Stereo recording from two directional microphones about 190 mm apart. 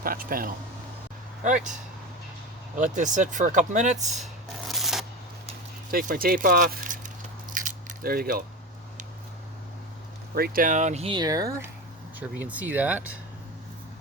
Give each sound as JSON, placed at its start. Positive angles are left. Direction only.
{"t": 0.0, "sound": "speech", "side_deg": -50}
{"t": 2.7, "sound": "speech", "side_deg": -40}
{"t": 4.6, "sound": "shuffling cards", "side_deg": 0}
{"t": 5.9, "sound": "speech", "side_deg": -50}
{"t": 7.5, "sound": "biting", "side_deg": -45}
{"t": 10.3, "sound": "speech", "side_deg": -50}
{"t": 12.2, "sound": "speech", "side_deg": -5}